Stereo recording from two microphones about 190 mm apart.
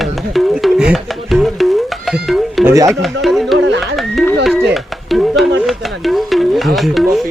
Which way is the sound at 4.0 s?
Centre (ahead or behind).